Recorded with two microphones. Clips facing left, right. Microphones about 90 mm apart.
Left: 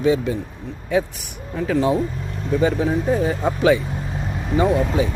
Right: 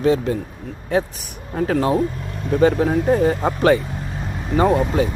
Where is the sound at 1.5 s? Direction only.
50° right (ahead or behind).